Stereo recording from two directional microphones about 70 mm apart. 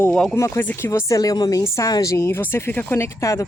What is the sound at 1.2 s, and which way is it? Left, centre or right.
A woman's voice, left.